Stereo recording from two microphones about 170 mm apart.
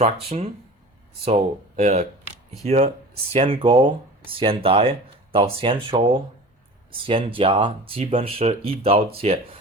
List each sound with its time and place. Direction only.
0.0 s speech: 35° right (ahead or behind)